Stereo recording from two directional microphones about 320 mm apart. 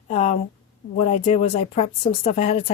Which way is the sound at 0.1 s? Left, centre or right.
Centre.